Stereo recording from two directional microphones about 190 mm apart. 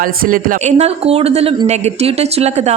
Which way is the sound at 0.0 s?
45° right (ahead or behind).